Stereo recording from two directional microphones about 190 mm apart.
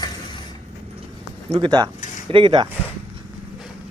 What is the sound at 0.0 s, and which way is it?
Vehicle, 25° left (ahead or behind).